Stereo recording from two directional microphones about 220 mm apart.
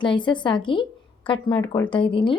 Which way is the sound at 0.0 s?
20° left (ahead or behind).